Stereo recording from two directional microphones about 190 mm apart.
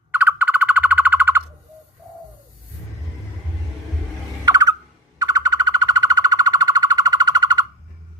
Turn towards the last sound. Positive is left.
turn(degrees=-20)  # may be behind; listen again after turning